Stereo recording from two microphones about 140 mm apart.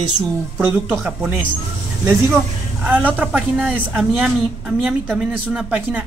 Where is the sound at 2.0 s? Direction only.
10° right (ahead or behind).